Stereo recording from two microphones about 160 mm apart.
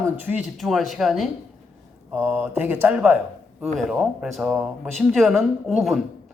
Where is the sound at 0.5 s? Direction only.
Centre (ahead or behind).